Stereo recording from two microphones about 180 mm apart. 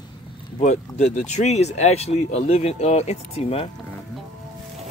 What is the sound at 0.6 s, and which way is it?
Speech, 40° left (ahead or behind).